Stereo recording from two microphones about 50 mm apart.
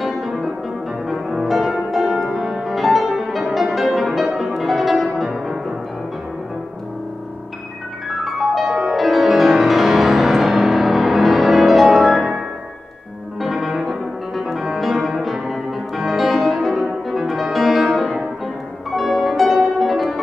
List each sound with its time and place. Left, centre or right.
1.0 s music: centre
8.2 s music: centre